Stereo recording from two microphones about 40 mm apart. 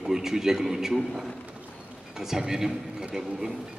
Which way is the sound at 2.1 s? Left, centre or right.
Centre.